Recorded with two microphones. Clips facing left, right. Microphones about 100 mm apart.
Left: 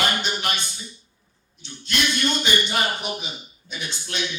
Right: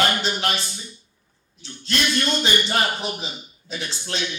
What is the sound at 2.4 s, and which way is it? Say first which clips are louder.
A man's voice: right 1 dB; 35° right (ahead or behind).